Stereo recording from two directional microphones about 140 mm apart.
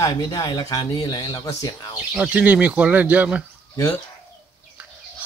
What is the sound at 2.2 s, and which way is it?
Speech, 10° right (ahead or behind).